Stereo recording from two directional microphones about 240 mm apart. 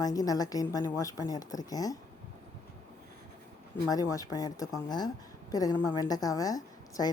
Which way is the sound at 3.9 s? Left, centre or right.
Centre.